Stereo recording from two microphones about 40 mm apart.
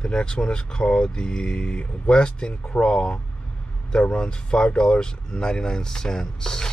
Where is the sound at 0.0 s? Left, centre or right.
Left.